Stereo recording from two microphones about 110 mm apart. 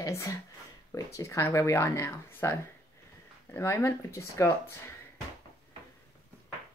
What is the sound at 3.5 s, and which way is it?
Speech, 25° left (ahead or behind).